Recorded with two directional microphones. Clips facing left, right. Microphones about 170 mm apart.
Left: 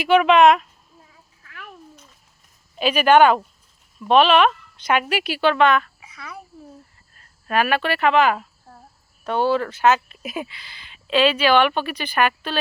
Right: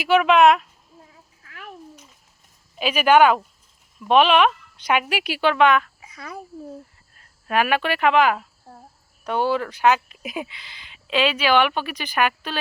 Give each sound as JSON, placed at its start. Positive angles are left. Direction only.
{"t": 0.0, "sound": "speech", "side_deg": -5}
{"t": 2.7, "sound": "speech", "side_deg": -10}
{"t": 6.1, "sound": "a child's voice", "side_deg": -45}
{"t": 7.2, "sound": "speech", "side_deg": -15}